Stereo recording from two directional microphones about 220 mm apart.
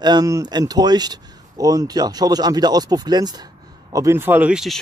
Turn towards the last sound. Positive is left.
turn(degrees=-5)  # may be behind; listen again after turning